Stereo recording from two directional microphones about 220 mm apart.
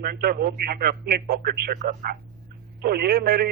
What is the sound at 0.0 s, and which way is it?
A man's voice, 45° right (ahead or behind).